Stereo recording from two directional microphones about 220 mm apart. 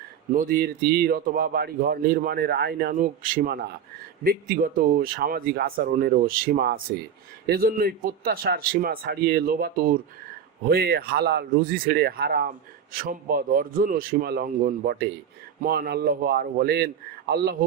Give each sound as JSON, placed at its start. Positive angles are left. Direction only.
{"t": 0.3, "sound": "a man's voice", "side_deg": -40}